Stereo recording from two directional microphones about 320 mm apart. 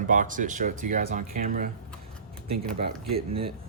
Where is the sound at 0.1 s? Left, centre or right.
Right.